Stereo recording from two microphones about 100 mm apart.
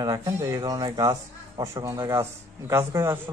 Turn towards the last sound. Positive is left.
turn(degrees=-30)  # may be behind; listen again after turning